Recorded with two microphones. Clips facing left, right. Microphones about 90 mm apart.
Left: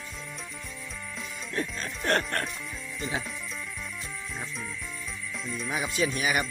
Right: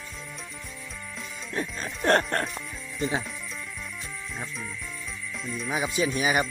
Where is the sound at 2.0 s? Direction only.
30° right (ahead or behind).